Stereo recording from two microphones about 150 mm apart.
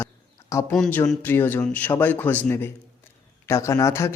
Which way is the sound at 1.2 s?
15° left (ahead or behind).